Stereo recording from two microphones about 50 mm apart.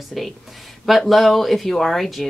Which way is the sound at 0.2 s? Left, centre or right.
Centre.